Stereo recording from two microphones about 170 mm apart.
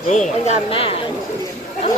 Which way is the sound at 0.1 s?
45° left (ahead or behind).